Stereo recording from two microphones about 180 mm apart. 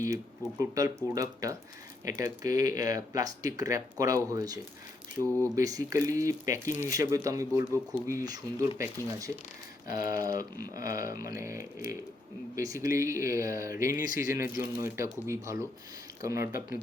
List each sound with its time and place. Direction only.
0.6 s speech: 15° right (ahead or behind)
13.9 s speech: 50° left (ahead or behind)
14.3 s speech: 15° right (ahead or behind)